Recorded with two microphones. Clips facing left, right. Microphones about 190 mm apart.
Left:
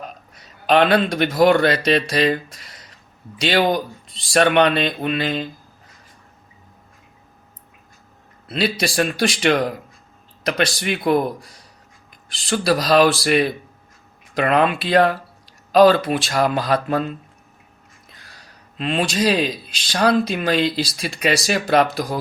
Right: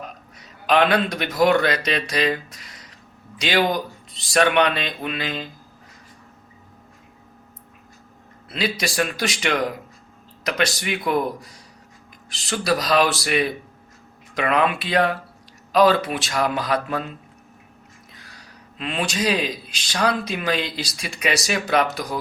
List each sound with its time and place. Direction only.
0.7 s speech: 30° left (ahead or behind)
8.4 s speech: 30° left (ahead or behind)
12.5 s speech: 30° left (ahead or behind)
18.8 s speech: 30° left (ahead or behind)